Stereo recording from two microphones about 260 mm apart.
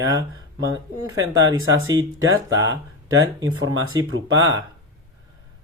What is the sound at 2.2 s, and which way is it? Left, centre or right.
Speech, right.